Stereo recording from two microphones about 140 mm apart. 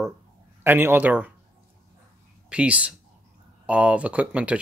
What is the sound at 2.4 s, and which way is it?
Speech, 10° right (ahead or behind).